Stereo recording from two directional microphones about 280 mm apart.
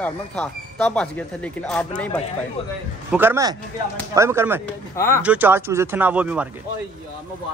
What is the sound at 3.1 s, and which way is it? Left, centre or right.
Speech, centre.